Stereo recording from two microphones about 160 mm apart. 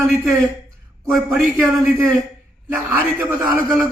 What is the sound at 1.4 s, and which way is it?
A man's voice, 15° right (ahead or behind).